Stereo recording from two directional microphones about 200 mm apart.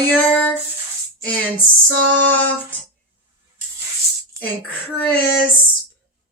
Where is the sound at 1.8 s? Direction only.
65° right (ahead or behind).